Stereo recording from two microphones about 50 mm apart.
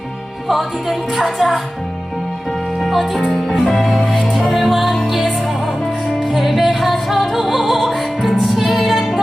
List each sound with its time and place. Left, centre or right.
0.4 s speech: centre
2.8 s speech: centre
3.3 s music: centre